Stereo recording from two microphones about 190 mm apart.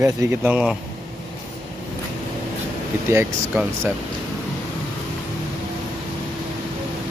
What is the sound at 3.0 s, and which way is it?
Speech, 15° right (ahead or behind).